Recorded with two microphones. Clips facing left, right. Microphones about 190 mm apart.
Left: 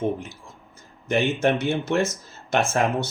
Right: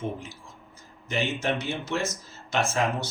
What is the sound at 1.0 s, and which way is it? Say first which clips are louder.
Speech: left 7 dB; 55° left (ahead or behind).